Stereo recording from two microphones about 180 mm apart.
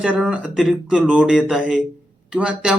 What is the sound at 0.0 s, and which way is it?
Speech, 5° right (ahead or behind).